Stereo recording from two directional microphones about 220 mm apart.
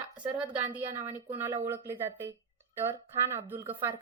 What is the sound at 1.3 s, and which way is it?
A woman's voice, 10° right (ahead or behind).